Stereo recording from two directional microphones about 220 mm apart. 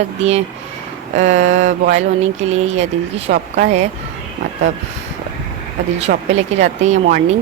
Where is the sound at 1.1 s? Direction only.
30° right (ahead or behind).